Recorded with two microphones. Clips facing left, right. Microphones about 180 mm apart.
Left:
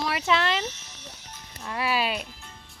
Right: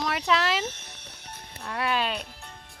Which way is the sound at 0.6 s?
60° right (ahead or behind).